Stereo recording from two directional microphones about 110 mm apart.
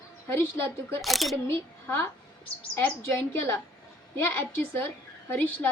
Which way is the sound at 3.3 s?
20° left (ahead or behind).